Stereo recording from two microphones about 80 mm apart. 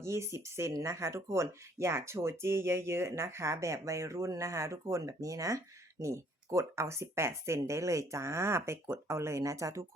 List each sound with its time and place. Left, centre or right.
0.0 s speech: right